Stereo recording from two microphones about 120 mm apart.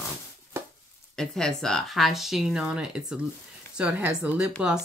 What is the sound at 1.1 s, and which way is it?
Speech, 5° left (ahead or behind).